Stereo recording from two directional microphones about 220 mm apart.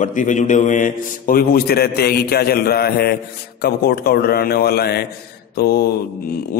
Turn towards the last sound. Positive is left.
turn(degrees=45)  # may be behind; listen again after turning